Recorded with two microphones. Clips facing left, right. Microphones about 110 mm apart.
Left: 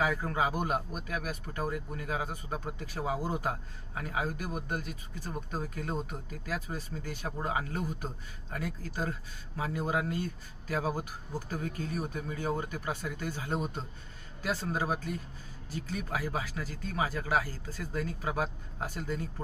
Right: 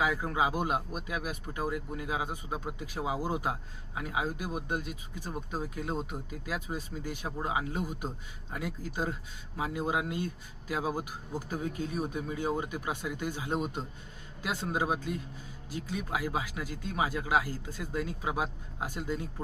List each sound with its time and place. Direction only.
0.0 s speech: 15° right (ahead or behind)